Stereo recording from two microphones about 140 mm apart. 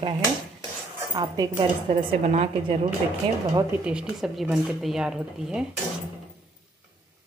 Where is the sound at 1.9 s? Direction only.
50° right (ahead or behind).